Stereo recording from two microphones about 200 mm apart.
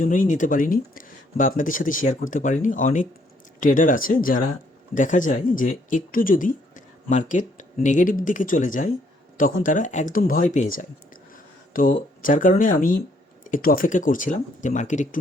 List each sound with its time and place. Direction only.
0.0 s speech: 40° left (ahead or behind)